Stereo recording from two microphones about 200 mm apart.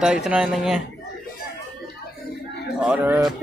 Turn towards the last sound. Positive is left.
turn(degrees=-10)  # may be behind; listen again after turning